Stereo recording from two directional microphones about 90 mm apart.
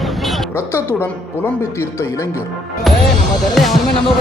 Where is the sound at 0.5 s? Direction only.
25° left (ahead or behind).